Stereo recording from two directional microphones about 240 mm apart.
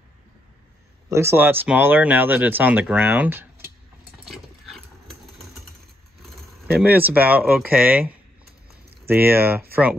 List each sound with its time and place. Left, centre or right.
1.0 s speech: centre
4.2 s a sound: centre
6.7 s speech: centre